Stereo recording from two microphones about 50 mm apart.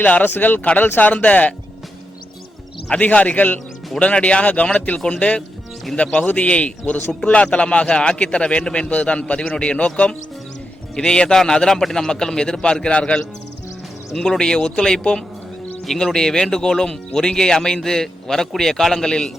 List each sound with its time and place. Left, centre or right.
0.0 s speech: left
0.6 s a man's voice: left
2.9 s a man's voice: left
14.1 s speech: centre
14.3 s speech: centre